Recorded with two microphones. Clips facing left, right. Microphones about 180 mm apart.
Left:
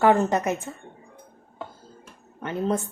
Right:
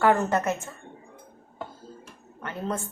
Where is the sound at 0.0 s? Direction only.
20° left (ahead or behind).